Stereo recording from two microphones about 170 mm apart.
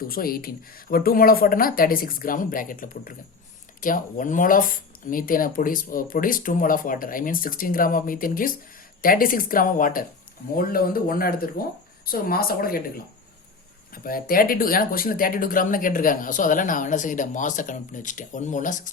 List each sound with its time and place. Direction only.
0.0 s speech: 60° left (ahead or behind)
13.9 s speech: 60° left (ahead or behind)